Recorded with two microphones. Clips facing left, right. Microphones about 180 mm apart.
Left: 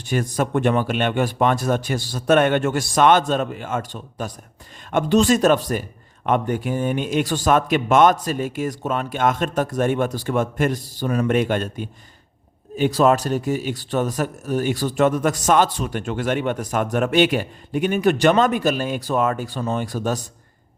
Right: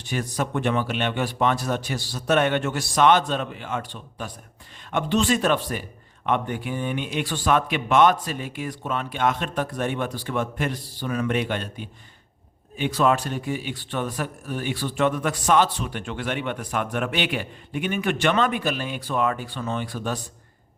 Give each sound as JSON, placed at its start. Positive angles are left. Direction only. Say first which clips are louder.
{"t": 0.0, "sound": "speech", "louder": "left 5 dB", "side_deg": 45}